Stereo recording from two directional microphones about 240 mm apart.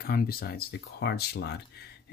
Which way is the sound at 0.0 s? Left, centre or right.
Left.